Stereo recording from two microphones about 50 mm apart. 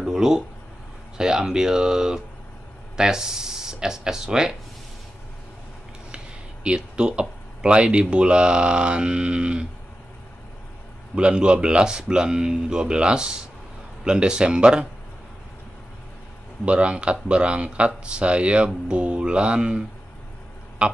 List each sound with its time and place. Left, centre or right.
0.0 s a sound: centre
1.1 s speech: centre
6.1 s speech: centre
11.1 s speech: centre
16.6 s speech: right
20.8 s speech: centre